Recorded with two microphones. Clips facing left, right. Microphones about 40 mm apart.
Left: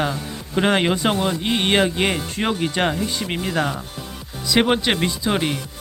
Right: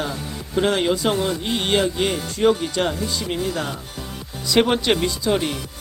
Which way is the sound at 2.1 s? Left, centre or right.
Left.